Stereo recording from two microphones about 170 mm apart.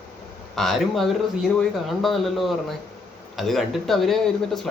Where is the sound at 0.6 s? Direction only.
Centre (ahead or behind).